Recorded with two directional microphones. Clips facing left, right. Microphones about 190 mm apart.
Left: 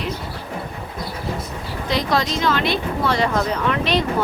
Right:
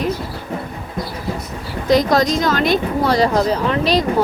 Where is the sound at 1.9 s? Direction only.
45° right (ahead or behind).